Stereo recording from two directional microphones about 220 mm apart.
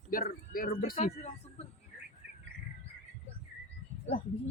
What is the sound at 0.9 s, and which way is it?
Speech, 30° left (ahead or behind).